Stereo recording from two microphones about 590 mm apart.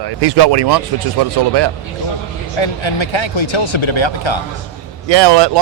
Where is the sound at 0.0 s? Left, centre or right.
Right.